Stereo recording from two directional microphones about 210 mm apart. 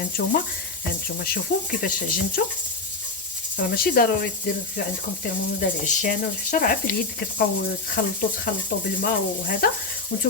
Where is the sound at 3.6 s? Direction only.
45° left (ahead or behind).